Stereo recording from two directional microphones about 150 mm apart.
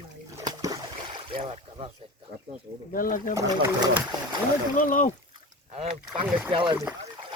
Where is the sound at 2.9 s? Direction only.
65° left (ahead or behind).